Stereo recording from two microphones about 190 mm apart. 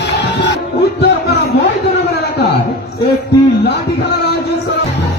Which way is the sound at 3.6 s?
60° left (ahead or behind).